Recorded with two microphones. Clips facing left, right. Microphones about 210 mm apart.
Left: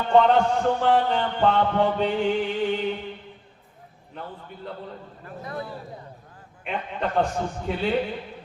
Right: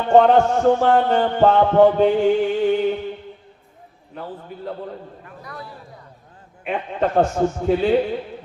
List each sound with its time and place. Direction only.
0.1 s music: 45° right (ahead or behind)
5.4 s a man's voice: 25° left (ahead or behind)
6.7 s music: 45° right (ahead or behind)